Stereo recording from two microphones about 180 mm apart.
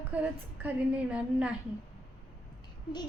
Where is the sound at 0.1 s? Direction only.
10° right (ahead or behind).